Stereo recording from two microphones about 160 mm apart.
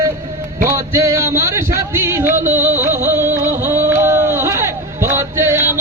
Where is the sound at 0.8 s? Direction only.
20° right (ahead or behind).